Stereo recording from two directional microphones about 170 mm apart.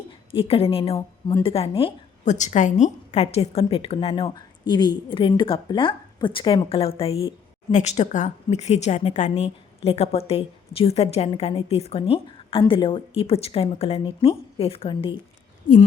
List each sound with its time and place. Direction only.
0.3 s a woman's voice: 35° left (ahead or behind)
2.2 s a woman's voice: 45° left (ahead or behind)
15.6 s speech: 50° left (ahead or behind)